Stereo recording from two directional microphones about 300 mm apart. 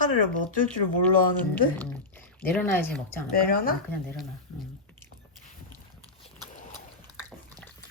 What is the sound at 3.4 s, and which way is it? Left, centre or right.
Speech, left.